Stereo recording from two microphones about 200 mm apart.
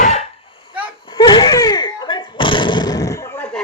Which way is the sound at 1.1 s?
20° left (ahead or behind).